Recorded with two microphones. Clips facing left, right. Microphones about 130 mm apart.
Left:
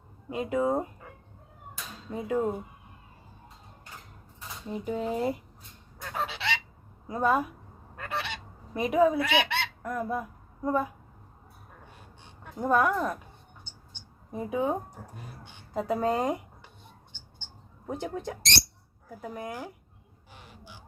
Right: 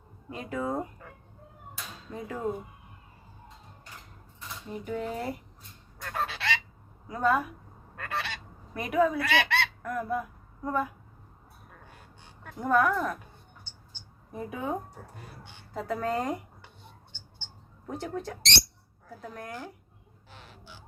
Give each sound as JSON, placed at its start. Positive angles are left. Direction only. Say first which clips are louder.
{"t": 0.3, "sound": "speech", "louder": "left 5 dB", "side_deg": 20}
{"t": 2.0, "sound": "speech", "louder": "left 8 dB", "side_deg": 20}
{"t": 4.7, "sound": "speech", "louder": "left 3 dB", "side_deg": 25}
{"t": 6.0, "sound": "goose", "louder": "even", "side_deg": 15}
{"t": 7.1, "sound": "speech", "louder": "left 1 dB", "side_deg": 20}
{"t": 7.9, "sound": "goose", "louder": "even", "side_deg": 20}
{"t": 12.4, "sound": "speech", "louder": "even", "side_deg": 20}
{"t": 14.3, "sound": "speech", "louder": "left 6 dB", "side_deg": 20}
{"t": 15.7, "sound": "speech", "louder": "left 3 dB", "side_deg": 20}
{"t": 17.8, "sound": "a woman's voice", "louder": "left 1 dB", "side_deg": 20}
{"t": 20.3, "sound": "a sound", "louder": "left 1 dB", "side_deg": 15}